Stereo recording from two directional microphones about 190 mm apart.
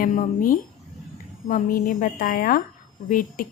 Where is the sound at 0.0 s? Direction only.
40° left (ahead or behind).